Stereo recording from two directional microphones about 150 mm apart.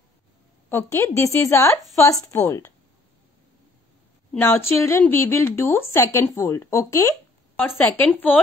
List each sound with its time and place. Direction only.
0.7 s a woman's voice: 15° left (ahead or behind)
4.4 s a woman's voice: 15° left (ahead or behind)